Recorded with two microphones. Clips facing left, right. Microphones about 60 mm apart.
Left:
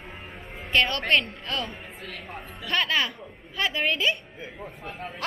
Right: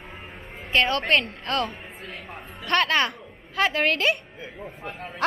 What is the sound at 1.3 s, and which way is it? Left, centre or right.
Speech, right.